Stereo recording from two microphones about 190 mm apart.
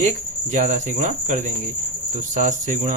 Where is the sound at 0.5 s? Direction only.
40° right (ahead or behind).